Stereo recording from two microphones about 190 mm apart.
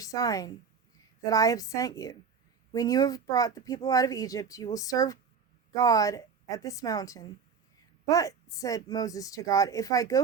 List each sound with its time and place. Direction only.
0.0 s a woman's voice: 20° left (ahead or behind)